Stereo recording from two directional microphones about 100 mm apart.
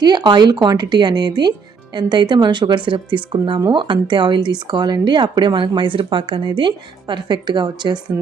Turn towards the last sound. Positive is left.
turn(degrees=-45)  # may be behind; listen again after turning